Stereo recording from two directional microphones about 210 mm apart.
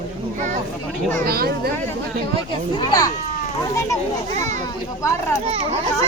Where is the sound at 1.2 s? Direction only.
45° right (ahead or behind).